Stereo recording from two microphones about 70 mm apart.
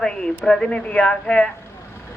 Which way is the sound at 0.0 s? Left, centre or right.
Centre.